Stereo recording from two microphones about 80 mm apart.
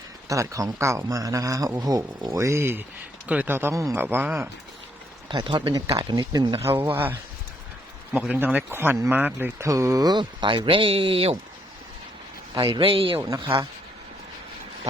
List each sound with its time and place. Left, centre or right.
0.3 s speech: right
5.3 s speech: right
6.1 s speech: right
6.6 s speech: right
8.2 s speech: centre
9.6 s speech: right
10.2 s speech: right
12.5 s speech: right
13.2 s speech: right